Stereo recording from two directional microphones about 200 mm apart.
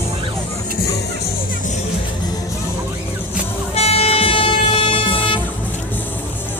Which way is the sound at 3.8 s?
30° left (ahead or behind).